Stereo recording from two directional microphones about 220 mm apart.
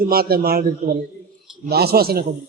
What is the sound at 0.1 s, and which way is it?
A man's voice, 45° right (ahead or behind).